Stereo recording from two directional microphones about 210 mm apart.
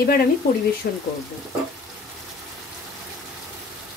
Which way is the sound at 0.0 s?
45° left (ahead or behind).